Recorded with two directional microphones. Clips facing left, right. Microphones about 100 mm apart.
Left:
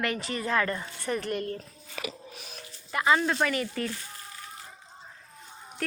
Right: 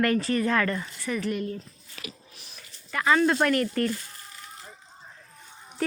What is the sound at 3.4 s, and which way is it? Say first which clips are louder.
Speech: right 6 dB; 5° left (ahead or behind).